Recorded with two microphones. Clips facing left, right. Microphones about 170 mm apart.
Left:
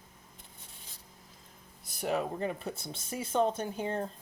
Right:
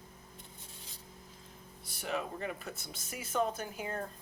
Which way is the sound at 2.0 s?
35° left (ahead or behind).